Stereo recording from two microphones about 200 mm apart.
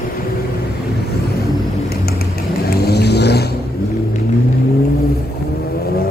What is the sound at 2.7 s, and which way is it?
Vehicle, 55° left (ahead or behind).